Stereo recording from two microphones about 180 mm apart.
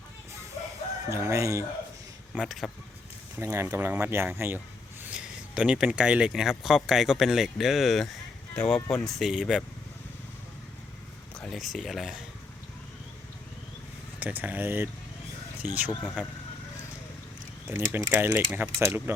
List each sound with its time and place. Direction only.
1.1 s speech: 15° right (ahead or behind)
2.3 s speech: centre (ahead or behind)
3.3 s speech: 15° right (ahead or behind)
11.3 s speech: centre (ahead or behind)
14.2 s speech: 10° right (ahead or behind)
17.7 s speech: 10° right (ahead or behind)